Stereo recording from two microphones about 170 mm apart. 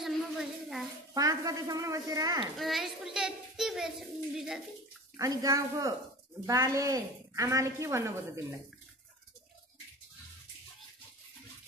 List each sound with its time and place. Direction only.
0.0 s child singing: centre (ahead or behind)
1.1 s speech: 20° right (ahead or behind)
2.5 s a child's voice: centre (ahead or behind)
5.1 s a woman's voice: 20° right (ahead or behind)